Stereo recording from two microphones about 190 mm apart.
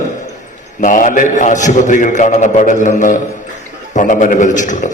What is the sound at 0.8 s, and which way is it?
A man's voice, 45° left (ahead or behind).